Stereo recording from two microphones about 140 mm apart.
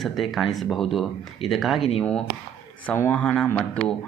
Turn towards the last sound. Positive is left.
turn(degrees=5)  # may be behind; listen again after turning